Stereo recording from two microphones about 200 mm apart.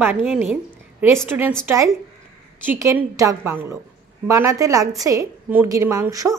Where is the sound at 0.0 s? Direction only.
10° right (ahead or behind).